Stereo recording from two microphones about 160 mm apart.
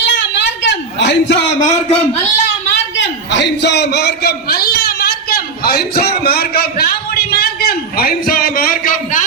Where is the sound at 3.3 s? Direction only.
90° left.